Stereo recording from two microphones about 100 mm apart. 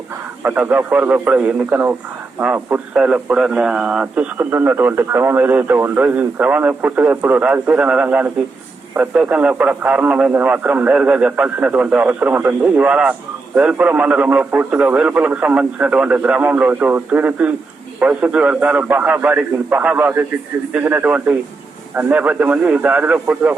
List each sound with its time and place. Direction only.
0.4 s speech: 15° right (ahead or behind)